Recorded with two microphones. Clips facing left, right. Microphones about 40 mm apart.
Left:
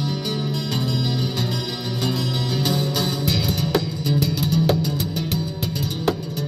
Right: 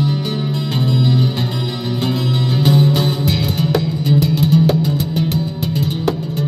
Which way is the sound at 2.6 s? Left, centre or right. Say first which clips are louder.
Right 10 dB; centre.